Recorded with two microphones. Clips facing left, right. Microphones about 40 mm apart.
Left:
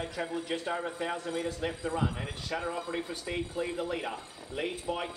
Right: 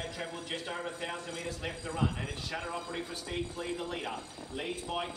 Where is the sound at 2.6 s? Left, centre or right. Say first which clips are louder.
Left 3 dB; centre.